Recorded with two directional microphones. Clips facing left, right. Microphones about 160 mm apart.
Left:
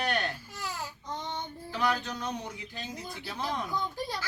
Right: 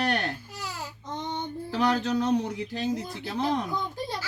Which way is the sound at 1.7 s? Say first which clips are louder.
Right 6 dB; 70° right (ahead or behind).